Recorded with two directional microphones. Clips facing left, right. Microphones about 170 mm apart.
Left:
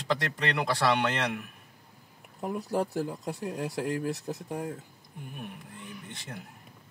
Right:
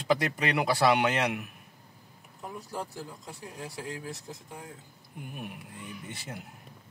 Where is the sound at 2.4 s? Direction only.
65° left (ahead or behind).